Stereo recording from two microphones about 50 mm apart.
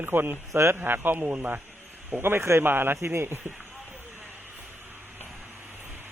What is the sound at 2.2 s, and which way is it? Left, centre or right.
Speech, right.